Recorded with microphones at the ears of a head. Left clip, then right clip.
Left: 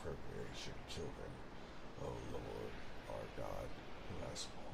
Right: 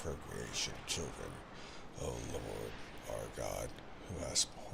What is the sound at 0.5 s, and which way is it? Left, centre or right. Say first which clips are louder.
Speech: right 10 dB; right.